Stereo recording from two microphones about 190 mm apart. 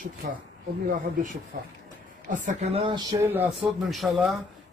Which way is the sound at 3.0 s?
15° right (ahead or behind).